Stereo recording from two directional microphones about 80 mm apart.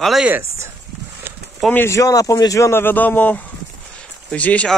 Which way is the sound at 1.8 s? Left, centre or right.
Left.